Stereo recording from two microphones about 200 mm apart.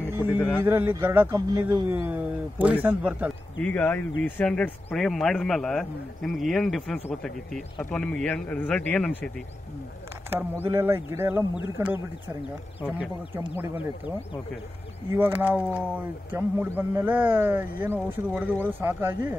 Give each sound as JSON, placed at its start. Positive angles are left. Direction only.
{"t": 0.1, "sound": "a sound", "side_deg": -10}
{"t": 0.7, "sound": "speech", "side_deg": -15}
{"t": 3.6, "sound": "a man's voice", "side_deg": 10}
{"t": 10.6, "sound": "a man's voice", "side_deg": -10}
{"t": 15.0, "sound": "speech", "side_deg": -10}